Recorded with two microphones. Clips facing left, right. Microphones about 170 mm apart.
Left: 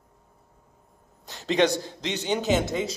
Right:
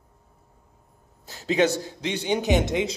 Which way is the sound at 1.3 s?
5° right (ahead or behind).